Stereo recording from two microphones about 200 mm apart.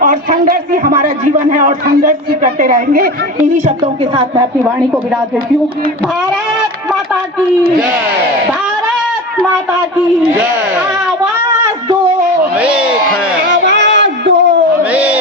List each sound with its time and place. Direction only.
0.0 s a man's voice: 45° right (ahead or behind)
1.9 s a man's voice: 45° right (ahead or behind)
4.1 s a woman's voice: 20° right (ahead or behind)
12.5 s a sound: 5° right (ahead or behind)
13.5 s music: 65° right (ahead or behind)
14.9 s a sound: 5° right (ahead or behind)